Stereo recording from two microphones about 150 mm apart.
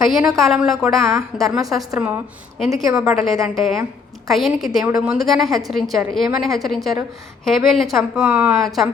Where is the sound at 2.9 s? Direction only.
5° right (ahead or behind).